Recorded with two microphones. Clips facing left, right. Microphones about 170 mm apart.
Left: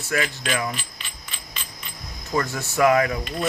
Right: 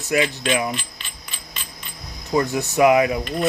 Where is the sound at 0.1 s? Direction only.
20° right (ahead or behind).